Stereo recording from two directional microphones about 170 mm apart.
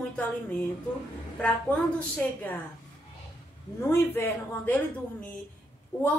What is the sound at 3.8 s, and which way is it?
Speech, 15° left (ahead or behind).